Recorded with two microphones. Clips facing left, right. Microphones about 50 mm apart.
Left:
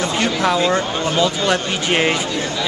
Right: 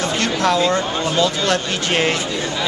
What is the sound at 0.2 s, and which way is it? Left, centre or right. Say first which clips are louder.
Speech: even; centre.